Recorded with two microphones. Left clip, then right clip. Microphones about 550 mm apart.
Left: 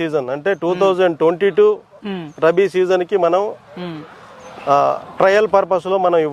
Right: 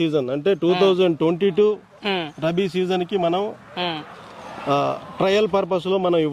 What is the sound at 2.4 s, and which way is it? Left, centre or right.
Speech, left.